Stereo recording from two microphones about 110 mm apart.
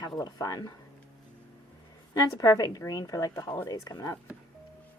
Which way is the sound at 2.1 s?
35° left (ahead or behind).